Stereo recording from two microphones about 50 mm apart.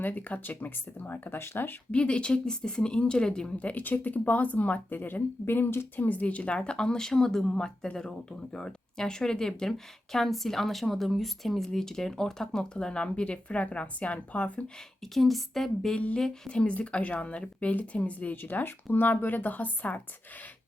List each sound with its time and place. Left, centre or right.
0.0 s speech: left
1.9 s speech: left
3.6 s speech: left
6.0 s speech: left
15.0 s a woman's voice: centre
16.5 s speech: left
18.4 s speech: left